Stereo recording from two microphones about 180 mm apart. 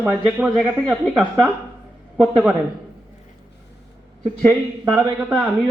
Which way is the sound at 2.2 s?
Centre (ahead or behind).